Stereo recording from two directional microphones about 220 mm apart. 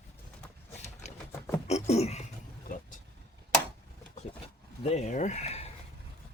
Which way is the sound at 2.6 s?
40° left (ahead or behind).